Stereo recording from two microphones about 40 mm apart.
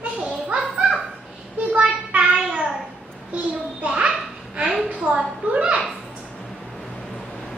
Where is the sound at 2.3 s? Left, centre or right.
Centre.